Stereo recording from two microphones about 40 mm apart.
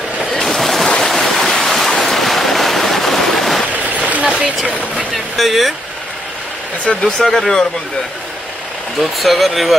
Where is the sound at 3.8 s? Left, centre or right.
Right.